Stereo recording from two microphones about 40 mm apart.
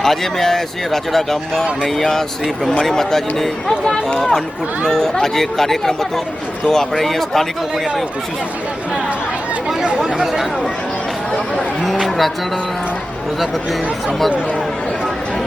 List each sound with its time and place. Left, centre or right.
0.0 s speech: centre
11.3 s speech: centre
12.0 s speech: centre
13.4 s speech: centre